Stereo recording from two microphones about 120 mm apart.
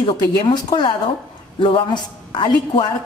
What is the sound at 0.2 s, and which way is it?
A man's voice, 35° left (ahead or behind).